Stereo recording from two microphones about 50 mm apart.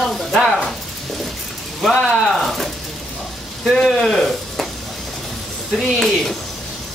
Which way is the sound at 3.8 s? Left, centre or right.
Centre.